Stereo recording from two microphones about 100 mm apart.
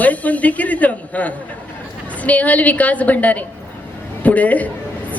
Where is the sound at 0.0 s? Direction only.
15° left (ahead or behind).